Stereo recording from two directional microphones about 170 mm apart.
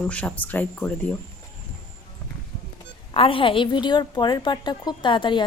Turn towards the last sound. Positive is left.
turn(degrees=30)  # may be behind; listen again after turning